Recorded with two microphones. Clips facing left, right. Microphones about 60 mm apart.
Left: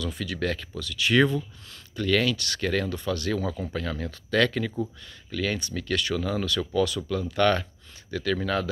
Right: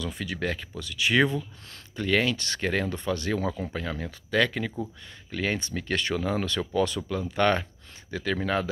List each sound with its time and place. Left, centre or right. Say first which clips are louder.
0.0 s speech: left 1 dB; right
5.3 s speech: even; right